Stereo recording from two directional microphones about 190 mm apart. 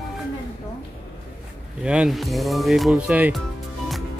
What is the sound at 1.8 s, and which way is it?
Speech, 5° right (ahead or behind).